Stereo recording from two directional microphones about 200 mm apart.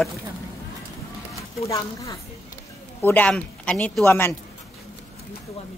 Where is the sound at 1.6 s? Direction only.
15° left (ahead or behind).